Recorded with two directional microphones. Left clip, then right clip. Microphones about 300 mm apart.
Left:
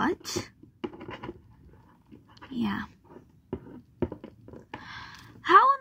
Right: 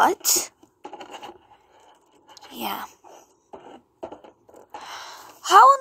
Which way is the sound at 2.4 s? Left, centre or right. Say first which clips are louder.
Right 3 dB; left.